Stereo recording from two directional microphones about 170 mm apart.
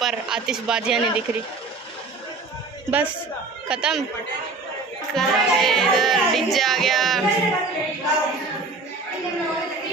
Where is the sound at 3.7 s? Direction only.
5° right (ahead or behind).